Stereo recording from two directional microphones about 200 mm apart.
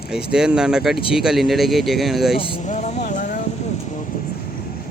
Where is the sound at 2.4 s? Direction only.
30° left (ahead or behind).